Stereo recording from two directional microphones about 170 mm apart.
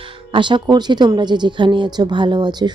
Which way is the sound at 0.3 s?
30° right (ahead or behind).